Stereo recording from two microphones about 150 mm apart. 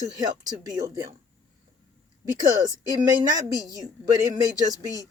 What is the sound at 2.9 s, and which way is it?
Speech, 25° right (ahead or behind).